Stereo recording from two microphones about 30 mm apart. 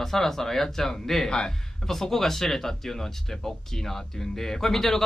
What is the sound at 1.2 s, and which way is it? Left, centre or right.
Speech, left.